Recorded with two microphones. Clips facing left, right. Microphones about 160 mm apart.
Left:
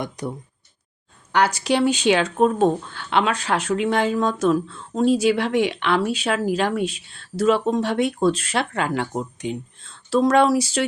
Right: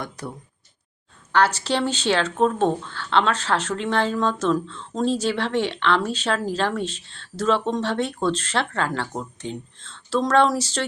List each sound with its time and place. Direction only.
0.2 s speech: 15° left (ahead or behind)